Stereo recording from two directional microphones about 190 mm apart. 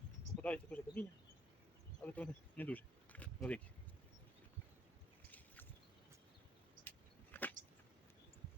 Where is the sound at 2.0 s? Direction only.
10° left (ahead or behind).